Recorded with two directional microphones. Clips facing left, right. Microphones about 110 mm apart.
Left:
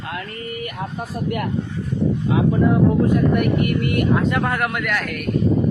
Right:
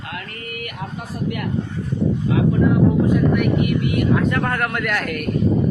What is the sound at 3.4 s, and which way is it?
Speech, 50° left (ahead or behind).